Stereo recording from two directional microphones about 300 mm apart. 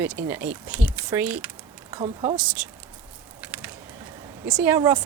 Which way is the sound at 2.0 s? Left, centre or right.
Right.